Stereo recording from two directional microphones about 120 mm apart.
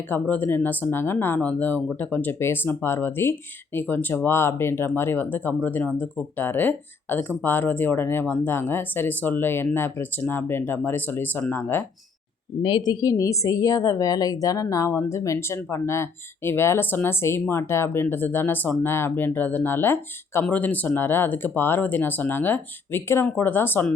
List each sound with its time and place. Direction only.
0.1 s speech: 15° left (ahead or behind)
12.6 s a woman's voice: 40° left (ahead or behind); by 23.9 s 15° left (ahead or behind)